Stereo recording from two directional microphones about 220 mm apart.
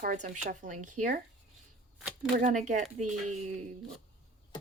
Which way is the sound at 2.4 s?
35° right (ahead or behind).